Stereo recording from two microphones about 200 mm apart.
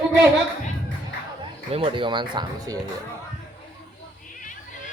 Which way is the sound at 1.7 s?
25° right (ahead or behind).